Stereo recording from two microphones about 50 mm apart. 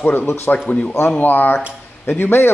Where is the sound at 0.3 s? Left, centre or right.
Left.